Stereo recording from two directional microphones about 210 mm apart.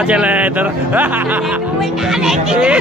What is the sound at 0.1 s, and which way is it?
Speech, 5° right (ahead or behind).